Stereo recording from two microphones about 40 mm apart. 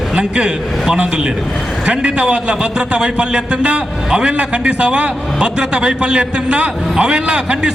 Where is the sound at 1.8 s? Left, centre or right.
Right.